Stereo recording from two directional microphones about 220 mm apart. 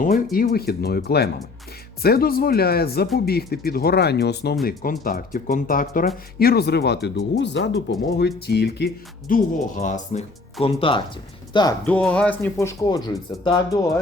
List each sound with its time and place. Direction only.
0.3 s speech: 40° left (ahead or behind)
9.3 s speech: 35° left (ahead or behind); by 11.7 s 20° left (ahead or behind)
11.9 s speech: 5° left (ahead or behind)